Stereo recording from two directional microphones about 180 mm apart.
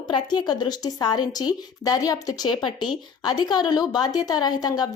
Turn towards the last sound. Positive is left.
turn(degrees=20)  # may be behind; listen again after turning